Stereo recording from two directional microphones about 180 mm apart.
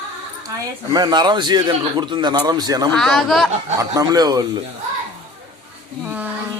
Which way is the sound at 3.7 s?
20° right (ahead or behind).